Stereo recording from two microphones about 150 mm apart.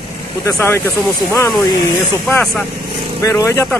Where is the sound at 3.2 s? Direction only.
20° left (ahead or behind).